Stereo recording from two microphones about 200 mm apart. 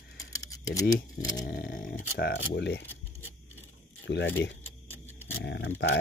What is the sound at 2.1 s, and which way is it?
Speech, 50° left (ahead or behind).